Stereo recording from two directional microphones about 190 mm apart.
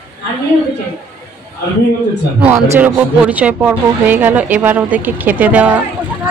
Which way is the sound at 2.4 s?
10° right (ahead or behind).